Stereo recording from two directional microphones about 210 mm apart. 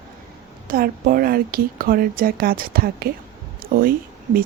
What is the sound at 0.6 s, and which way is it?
A woman's voice, 45° right (ahead or behind).